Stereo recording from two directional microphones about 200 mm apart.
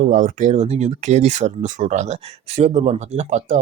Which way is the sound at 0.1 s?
40° right (ahead or behind).